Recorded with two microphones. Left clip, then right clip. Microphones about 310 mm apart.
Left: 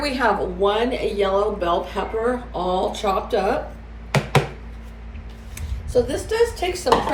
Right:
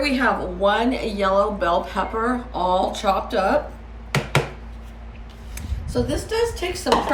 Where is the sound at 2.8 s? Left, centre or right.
Centre.